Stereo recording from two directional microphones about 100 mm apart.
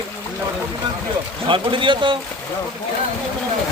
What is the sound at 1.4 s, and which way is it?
Speech, 55° right (ahead or behind).